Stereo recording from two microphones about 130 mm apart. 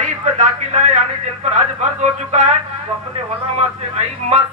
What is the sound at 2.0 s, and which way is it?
Speech, 60° right (ahead or behind).